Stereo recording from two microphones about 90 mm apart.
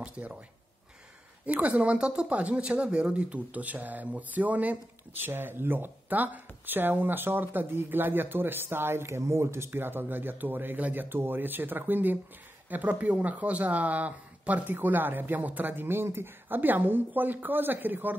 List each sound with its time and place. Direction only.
0.0 s speech: 15° right (ahead or behind)
1.4 s speech: 15° right (ahead or behind)